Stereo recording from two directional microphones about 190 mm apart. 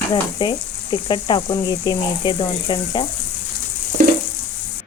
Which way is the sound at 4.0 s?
45° right (ahead or behind).